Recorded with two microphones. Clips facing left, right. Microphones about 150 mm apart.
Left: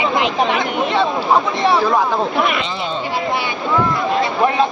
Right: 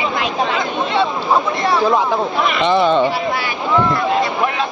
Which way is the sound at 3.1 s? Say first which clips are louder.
Even; 20° left (ahead or behind).